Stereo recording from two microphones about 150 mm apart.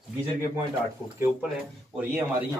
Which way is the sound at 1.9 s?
15° right (ahead or behind).